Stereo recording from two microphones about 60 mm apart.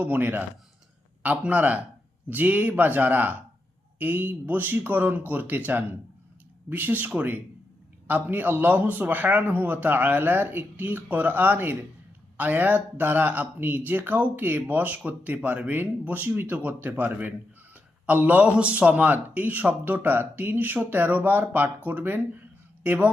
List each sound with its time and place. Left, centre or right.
0.0 s a man's voice: right